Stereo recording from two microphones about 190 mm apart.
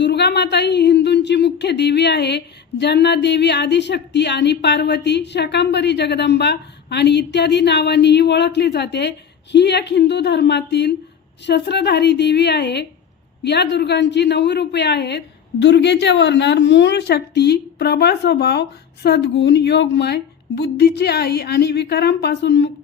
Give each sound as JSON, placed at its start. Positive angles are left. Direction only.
{"t": 0.0, "sound": "speech", "side_deg": 60}